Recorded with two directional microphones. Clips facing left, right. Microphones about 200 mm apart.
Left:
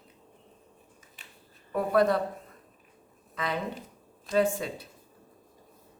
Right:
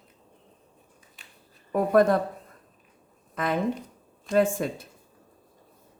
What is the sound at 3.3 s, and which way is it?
Speech, 50° right (ahead or behind).